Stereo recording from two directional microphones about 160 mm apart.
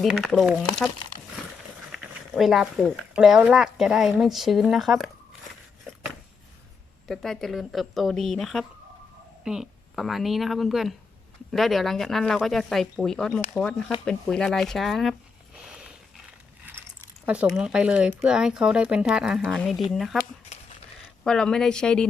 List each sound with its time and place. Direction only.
0.0 s speech: centre (ahead or behind)
1.9 s speech: centre (ahead or behind)
7.1 s speech: centre (ahead or behind)
15.7 s a sound: 5° right (ahead or behind)
17.2 s speech: 5° right (ahead or behind)
21.2 s speech: 5° left (ahead or behind)